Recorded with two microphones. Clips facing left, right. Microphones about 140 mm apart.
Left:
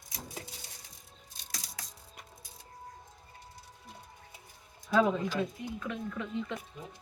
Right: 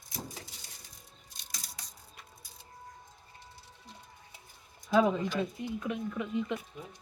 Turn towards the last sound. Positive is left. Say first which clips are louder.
# right 3 dB
turn(degrees=-15)  # may be behind; listen again after turning